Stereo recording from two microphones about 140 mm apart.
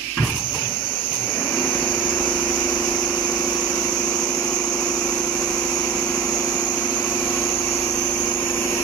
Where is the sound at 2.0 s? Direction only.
10° left (ahead or behind).